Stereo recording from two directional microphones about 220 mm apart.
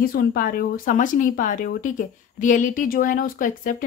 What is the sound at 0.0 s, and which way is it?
Speech, 40° left (ahead or behind).